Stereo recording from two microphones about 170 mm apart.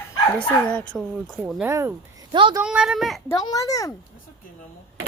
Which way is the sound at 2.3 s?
30° right (ahead or behind).